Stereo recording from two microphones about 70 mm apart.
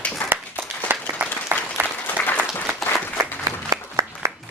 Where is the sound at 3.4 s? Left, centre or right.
Right.